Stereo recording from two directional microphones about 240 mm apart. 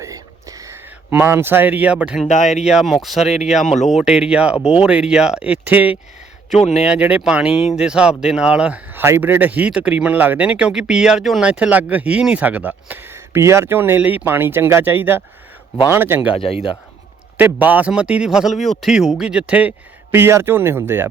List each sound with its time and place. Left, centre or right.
0.0 s a sound: centre
2.2 s speech: left
2.6 s a man's voice: centre
6.6 s speech: left
6.8 s a man's voice: centre
16.3 s speech: left
17.3 s a man's voice: centre